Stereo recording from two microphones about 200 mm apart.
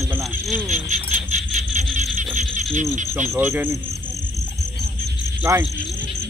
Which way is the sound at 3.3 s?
10° right (ahead or behind).